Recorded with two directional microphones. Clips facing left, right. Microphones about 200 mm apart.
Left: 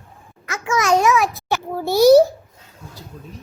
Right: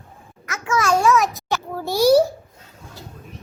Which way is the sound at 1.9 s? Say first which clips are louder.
Left 4 dB; 10° right (ahead or behind).